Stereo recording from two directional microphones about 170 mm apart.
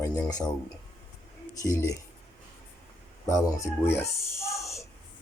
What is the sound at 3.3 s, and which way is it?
Speech, 15° left (ahead or behind).